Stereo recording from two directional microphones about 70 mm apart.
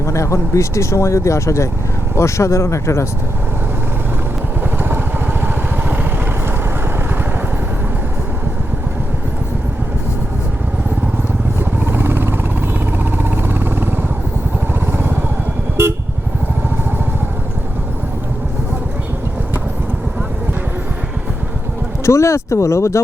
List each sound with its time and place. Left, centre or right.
0.0 s speech: left
4.8 s vehicle: right
11.6 s a sound: right
12.8 s vehicle: right
22.0 s speech: left